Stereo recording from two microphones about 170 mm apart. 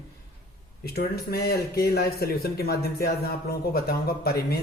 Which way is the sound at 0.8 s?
65° left (ahead or behind).